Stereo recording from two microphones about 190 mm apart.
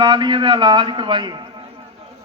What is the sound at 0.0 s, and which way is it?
A man's voice, 25° right (ahead or behind).